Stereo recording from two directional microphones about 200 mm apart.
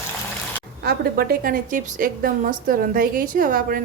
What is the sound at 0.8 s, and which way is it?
A woman's voice, 50° right (ahead or behind).